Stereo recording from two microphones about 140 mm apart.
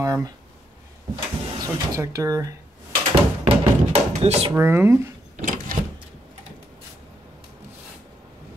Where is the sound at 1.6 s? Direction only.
25° right (ahead or behind).